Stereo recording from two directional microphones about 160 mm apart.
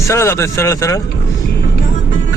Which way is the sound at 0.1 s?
15° left (ahead or behind).